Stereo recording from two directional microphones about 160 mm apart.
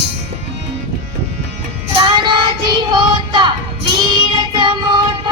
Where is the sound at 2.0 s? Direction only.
30° right (ahead or behind).